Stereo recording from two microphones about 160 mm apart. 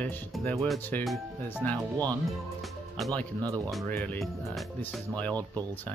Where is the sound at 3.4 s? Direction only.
20° right (ahead or behind).